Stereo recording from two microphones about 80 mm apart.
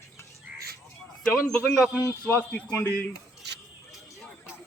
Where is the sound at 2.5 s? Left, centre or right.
Centre.